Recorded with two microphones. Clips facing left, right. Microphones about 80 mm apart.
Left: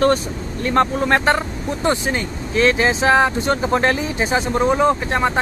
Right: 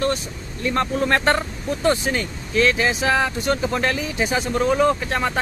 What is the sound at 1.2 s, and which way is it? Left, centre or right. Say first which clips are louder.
Speech: left 2 dB; centre.